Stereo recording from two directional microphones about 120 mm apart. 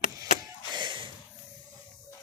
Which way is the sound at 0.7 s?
40° right (ahead or behind).